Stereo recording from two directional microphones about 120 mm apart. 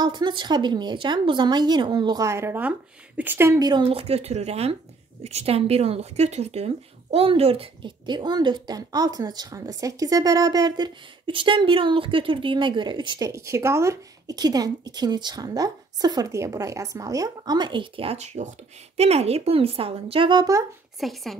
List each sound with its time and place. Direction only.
0.0 s speech: 40° right (ahead or behind); by 3.5 s 20° right (ahead or behind)
3.5 s speech: 35° right (ahead or behind)
3.8 s speech: 55° right (ahead or behind); by 13.3 s 40° right (ahead or behind)
13.3 s speech: 25° right (ahead or behind); by 18.1 s 45° right (ahead or behind)
18.1 s speech: 65° right (ahead or behind); by 20.6 s 30° right (ahead or behind)
21.0 s speech: centre (ahead or behind)